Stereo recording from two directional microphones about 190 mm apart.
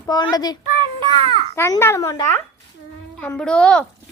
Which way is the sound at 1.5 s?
15° left (ahead or behind).